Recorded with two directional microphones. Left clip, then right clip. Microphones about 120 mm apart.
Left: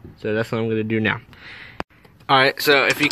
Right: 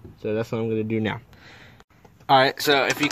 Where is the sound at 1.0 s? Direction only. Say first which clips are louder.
Left 6 dB; 15° right (ahead or behind).